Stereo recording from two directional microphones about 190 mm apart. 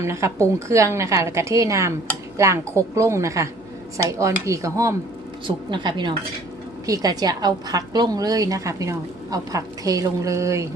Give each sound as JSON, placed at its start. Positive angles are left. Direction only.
{"t": 0.0, "sound": "a woman's voice", "side_deg": -15}